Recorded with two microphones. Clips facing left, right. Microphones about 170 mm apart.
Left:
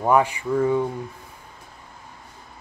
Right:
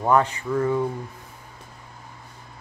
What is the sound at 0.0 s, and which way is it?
Speech, 10° left (ahead or behind).